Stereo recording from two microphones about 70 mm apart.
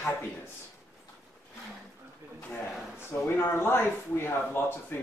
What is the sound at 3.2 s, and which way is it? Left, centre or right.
Speech, left.